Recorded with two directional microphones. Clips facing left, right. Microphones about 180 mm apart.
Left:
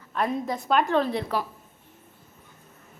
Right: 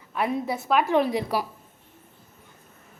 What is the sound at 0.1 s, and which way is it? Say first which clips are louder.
A woman's voice: right 1 dB; 5° right (ahead or behind).